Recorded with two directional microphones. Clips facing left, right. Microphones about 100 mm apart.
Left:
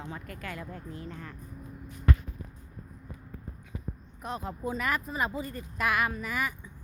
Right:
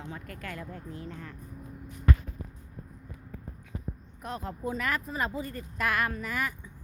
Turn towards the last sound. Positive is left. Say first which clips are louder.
# left 1 dB
turn(degrees=10)  # may be behind; listen again after turning